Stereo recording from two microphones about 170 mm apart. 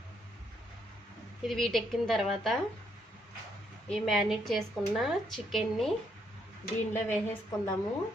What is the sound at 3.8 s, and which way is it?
A woman's voice, centre (ahead or behind).